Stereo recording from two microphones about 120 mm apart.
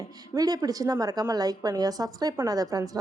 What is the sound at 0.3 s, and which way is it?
A woman's voice, 30° right (ahead or behind).